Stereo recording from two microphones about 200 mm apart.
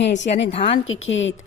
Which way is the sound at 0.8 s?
75° left (ahead or behind).